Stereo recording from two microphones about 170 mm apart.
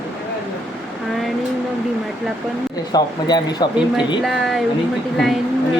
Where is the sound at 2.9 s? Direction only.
25° left (ahead or behind).